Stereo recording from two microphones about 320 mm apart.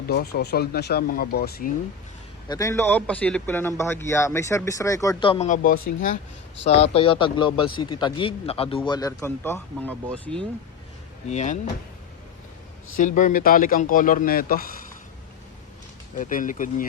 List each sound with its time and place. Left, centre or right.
0.1 s speech: left
2.5 s a man's voice: centre
11.3 s speech: left
13.0 s speech: left
16.1 s speech: left